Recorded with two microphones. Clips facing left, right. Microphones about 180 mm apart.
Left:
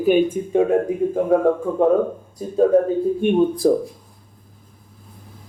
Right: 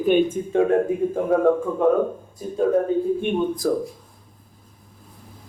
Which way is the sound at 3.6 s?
25° left (ahead or behind).